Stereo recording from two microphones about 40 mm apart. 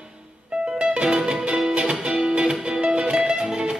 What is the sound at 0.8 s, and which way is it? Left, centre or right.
Music, right.